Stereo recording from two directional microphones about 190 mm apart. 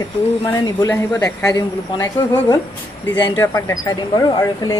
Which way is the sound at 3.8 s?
20° left (ahead or behind).